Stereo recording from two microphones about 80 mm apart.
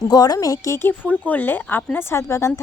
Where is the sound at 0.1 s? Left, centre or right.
Left.